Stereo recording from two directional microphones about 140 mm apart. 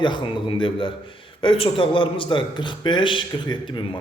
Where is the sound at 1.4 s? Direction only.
40° left (ahead or behind).